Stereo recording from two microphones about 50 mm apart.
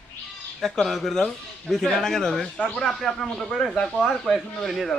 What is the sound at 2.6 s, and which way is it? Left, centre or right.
Speech, left.